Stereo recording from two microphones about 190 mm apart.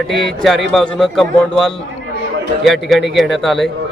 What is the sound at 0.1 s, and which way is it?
A man's voice, centre (ahead or behind).